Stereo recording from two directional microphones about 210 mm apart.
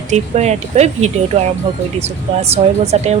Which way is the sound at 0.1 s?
30° right (ahead or behind).